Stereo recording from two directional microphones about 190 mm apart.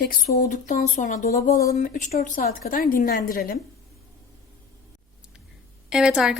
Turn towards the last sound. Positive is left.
turn(degrees=-5)  # may be behind; listen again after turning